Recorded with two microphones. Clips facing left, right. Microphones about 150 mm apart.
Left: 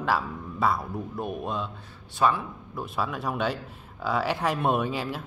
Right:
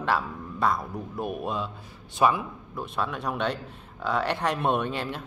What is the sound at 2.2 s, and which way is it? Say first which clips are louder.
Speech: right 1 dB; 15° right (ahead or behind).